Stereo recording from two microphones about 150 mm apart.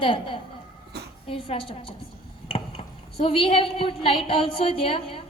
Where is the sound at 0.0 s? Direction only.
35° left (ahead or behind).